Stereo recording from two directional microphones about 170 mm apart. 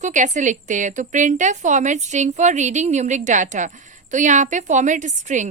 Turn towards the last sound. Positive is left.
turn(degrees=-45)  # may be behind; listen again after turning